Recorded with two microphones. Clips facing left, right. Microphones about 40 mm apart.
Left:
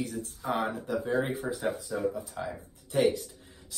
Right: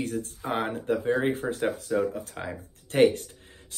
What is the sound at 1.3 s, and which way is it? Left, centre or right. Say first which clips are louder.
Speech: right 4 dB; right.